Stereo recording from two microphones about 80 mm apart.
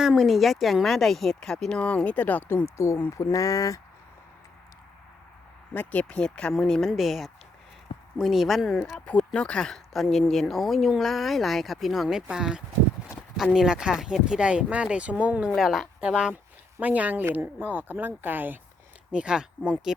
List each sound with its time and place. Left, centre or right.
0.2 s speech: centre; by 2.6 s left
2.7 s speech: left
5.7 s speech: left; by 8.8 s centre
9.0 s speech: centre
15.5 s speech: centre; by 18.6 s right
19.1 s speech: centre